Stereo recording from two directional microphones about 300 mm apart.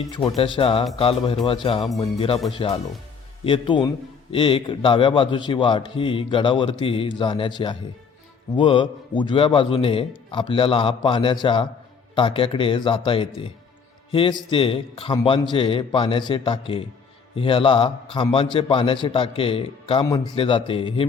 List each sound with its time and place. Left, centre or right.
0.1 s a man's voice: centre